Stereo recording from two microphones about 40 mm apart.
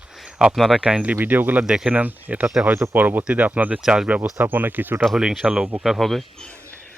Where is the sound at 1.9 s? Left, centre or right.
Right.